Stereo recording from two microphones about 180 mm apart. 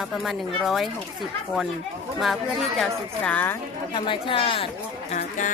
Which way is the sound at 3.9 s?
30° left (ahead or behind).